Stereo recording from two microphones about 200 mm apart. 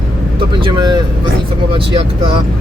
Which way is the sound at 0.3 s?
25° right (ahead or behind).